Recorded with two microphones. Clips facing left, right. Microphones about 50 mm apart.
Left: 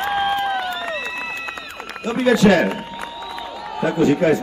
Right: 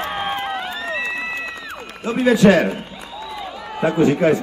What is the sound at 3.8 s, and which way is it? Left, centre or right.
Speech, right.